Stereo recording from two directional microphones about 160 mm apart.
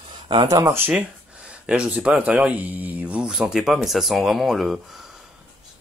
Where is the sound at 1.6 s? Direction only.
5° right (ahead or behind).